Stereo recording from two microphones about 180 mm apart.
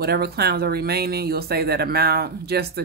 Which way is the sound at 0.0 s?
60° right (ahead or behind).